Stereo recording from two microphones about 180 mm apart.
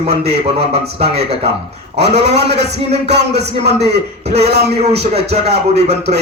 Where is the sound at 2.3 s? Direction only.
70° right (ahead or behind).